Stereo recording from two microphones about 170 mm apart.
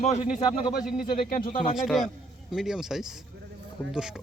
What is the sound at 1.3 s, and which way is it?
Speech, 55° left (ahead or behind).